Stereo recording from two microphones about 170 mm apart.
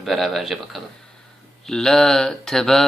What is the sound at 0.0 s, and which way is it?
Speech, centre (ahead or behind).